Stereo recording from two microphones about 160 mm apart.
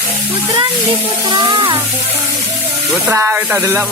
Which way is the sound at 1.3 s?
30° right (ahead or behind).